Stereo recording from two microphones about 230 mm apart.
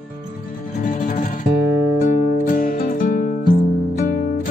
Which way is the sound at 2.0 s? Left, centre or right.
Left.